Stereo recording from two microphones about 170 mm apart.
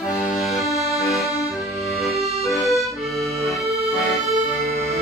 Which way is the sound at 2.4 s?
Centre (ahead or behind).